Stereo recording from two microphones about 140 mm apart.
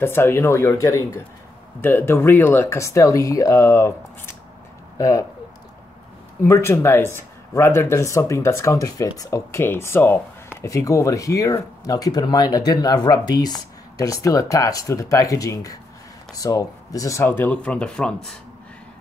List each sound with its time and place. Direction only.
0.0 s speech: 15° left (ahead or behind)
6.4 s speech: 20° left (ahead or behind); by 18.4 s 5° left (ahead or behind)